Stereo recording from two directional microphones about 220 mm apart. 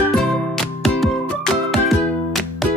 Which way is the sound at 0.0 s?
Centre (ahead or behind).